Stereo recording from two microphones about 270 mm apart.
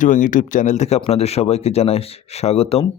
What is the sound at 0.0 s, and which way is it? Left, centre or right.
A man's voice, left.